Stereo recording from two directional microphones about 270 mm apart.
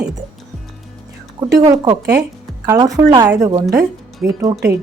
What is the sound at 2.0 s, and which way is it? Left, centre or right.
Speech, right.